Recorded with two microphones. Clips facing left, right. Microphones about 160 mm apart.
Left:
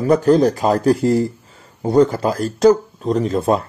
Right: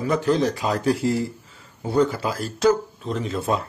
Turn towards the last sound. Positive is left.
turn(degrees=45)  # may be behind; listen again after turning